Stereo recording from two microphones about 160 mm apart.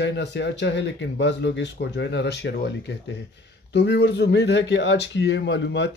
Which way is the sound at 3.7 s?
90° left.